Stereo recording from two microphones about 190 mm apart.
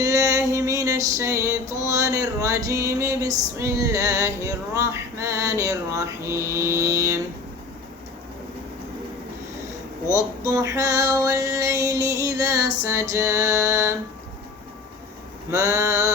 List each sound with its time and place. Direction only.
0.0 s music: 15° right (ahead or behind)
10.1 s music: 15° right (ahead or behind)
15.4 s music: 15° right (ahead or behind)